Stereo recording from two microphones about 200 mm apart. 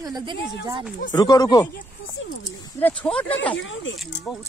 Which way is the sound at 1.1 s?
20° left (ahead or behind).